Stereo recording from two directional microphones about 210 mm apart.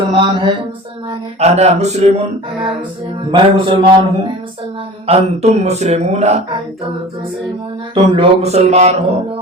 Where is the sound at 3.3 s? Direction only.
20° right (ahead or behind).